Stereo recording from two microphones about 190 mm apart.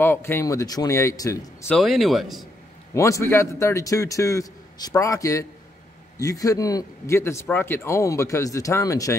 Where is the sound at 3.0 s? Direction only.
15° left (ahead or behind).